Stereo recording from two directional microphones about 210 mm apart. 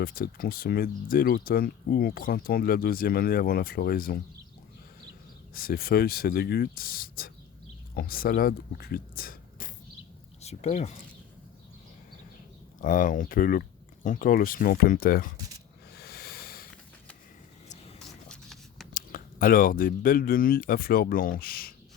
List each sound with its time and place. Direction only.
0.0 s speech: 45° left (ahead or behind)
5.5 s speech: 45° left (ahead or behind)
10.4 s speech: 30° left (ahead or behind)
12.8 s speech: 40° left (ahead or behind)
16.0 s a sound: 50° left (ahead or behind)
18.0 s writing: centre (ahead or behind)
18.9 s speech: 40° left (ahead or behind)